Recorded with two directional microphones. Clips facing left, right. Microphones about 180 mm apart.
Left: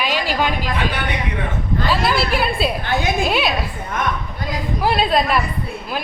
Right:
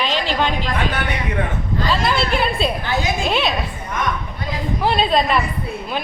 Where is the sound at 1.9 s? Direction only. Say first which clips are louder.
Even; 5° left (ahead or behind).